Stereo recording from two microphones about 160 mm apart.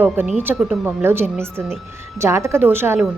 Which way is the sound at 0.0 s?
10° right (ahead or behind).